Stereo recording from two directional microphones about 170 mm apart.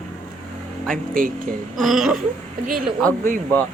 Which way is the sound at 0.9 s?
55° right (ahead or behind).